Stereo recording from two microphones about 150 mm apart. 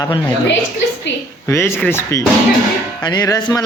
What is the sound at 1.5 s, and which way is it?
Speech, 15° left (ahead or behind).